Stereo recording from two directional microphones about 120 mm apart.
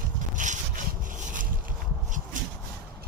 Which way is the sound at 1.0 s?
90° right.